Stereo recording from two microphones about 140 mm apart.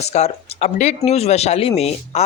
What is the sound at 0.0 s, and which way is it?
Speech, 50° left (ahead or behind).